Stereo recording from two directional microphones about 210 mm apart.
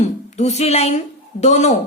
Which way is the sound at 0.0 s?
30° left (ahead or behind).